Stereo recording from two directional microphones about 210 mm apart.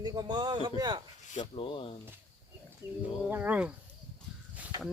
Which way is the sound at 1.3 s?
30° left (ahead or behind).